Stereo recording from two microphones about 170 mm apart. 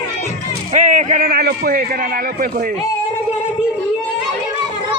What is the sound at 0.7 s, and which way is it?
A man's voice, 45° right (ahead or behind).